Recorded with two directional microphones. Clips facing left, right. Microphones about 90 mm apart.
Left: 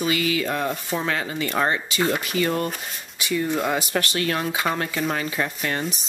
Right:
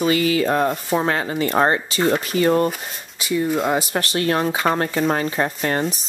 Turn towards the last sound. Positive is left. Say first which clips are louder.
# right 5 dB
turn(degrees=-40)  # may be behind; listen again after turning